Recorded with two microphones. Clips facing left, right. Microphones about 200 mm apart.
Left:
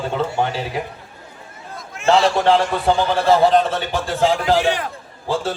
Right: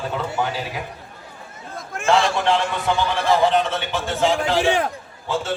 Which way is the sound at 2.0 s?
50° right (ahead or behind).